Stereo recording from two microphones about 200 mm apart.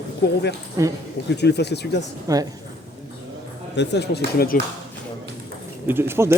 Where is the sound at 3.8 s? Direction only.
55° left (ahead or behind).